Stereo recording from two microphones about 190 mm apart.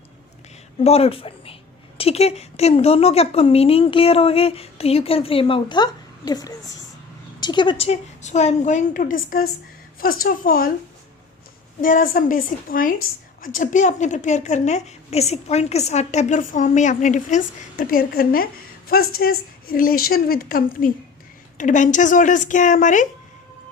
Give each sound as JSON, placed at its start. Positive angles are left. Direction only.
{"t": 0.8, "sound": "a woman's voice", "side_deg": 30}
{"t": 11.8, "sound": "a woman's voice", "side_deg": 45}